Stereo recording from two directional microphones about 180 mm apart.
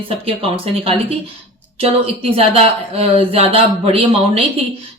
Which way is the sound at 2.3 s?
30° right (ahead or behind).